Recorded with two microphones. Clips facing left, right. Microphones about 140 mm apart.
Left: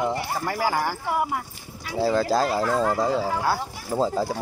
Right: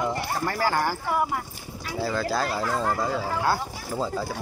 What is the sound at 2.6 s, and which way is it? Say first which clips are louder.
Speech: left 4 dB; centre (ahead or behind).